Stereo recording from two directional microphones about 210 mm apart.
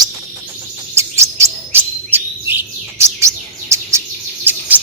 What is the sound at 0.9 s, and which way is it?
Chirp, 15° right (ahead or behind).